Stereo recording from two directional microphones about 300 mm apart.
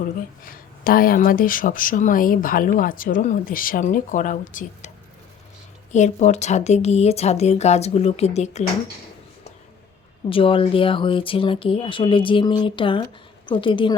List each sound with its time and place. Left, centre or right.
0.5 s speech: left
5.9 s speech: left
10.2 s speech: centre